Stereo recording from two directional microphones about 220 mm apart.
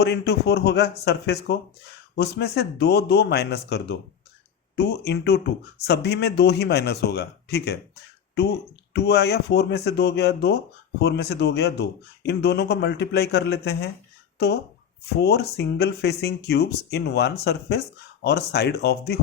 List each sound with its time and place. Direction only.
0.0 s speech: 50° left (ahead or behind)
8.9 s speech: 50° left (ahead or behind)